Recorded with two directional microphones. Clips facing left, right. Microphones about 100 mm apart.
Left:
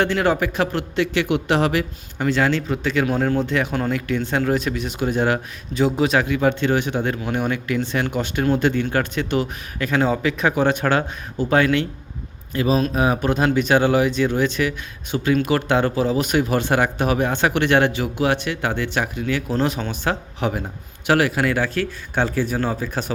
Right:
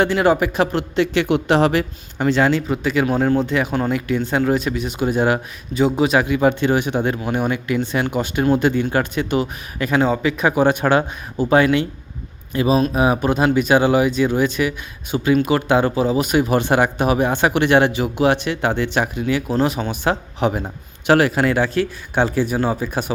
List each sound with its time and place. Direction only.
0.0 s a man's voice: 10° right (ahead or behind)
2.5 s speech: 10° right (ahead or behind)
10.0 s speech: 5° right (ahead or behind); by 19.4 s 20° right (ahead or behind)
19.5 s a man's voice: 5° right (ahead or behind)